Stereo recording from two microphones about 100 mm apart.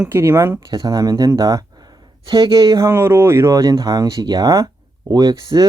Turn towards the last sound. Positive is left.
turn(degrees=-40)  # may be behind; listen again after turning